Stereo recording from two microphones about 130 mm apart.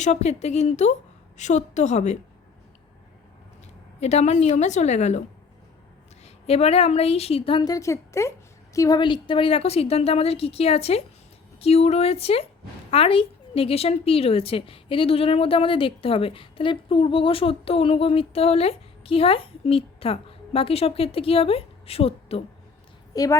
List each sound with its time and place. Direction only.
0.0 s a woman's voice: 60° left (ahead or behind)
4.0 s a woman's voice: 60° left (ahead or behind)
6.2 s a woman's voice: 50° left (ahead or behind)
7.6 s a woman's voice: 25° left (ahead or behind)
9.0 s a woman's voice: 40° left (ahead or behind)
23.1 s a woman's voice: 25° left (ahead or behind)